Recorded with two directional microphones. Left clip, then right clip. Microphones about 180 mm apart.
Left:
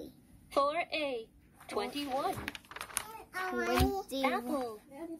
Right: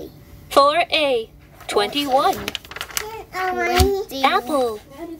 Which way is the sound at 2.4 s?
15° left (ahead or behind).